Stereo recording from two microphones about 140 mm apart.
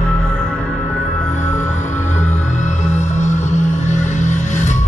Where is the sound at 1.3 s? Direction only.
60° left (ahead or behind).